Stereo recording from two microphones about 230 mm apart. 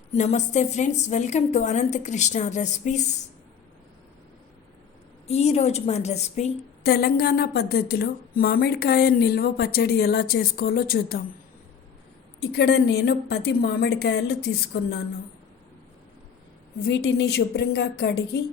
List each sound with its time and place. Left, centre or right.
0.1 s a woman's voice: left
5.3 s a woman's voice: left
6.8 s a woman's voice: left
12.4 s a woman's voice: left
16.8 s a woman's voice: left